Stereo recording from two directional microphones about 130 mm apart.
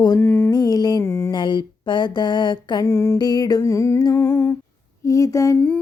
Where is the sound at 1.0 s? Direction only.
20° left (ahead or behind).